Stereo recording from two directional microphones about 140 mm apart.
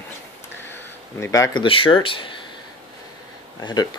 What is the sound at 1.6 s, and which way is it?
Speech, 40° left (ahead or behind).